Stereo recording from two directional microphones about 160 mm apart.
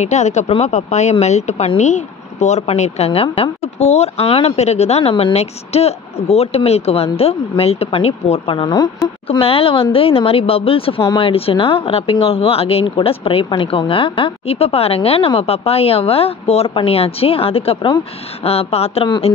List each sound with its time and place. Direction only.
0.0 s speech: 45° left (ahead or behind); by 8.9 s 25° left (ahead or behind)
9.3 s speech: 35° left (ahead or behind)